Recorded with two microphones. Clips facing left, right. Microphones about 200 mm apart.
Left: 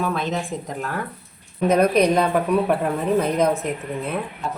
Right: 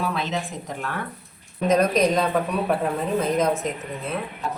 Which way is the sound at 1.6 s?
60° left (ahead or behind).